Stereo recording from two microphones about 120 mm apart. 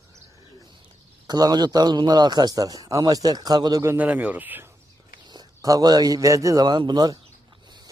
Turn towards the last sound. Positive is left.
turn(degrees=-35)  # may be behind; listen again after turning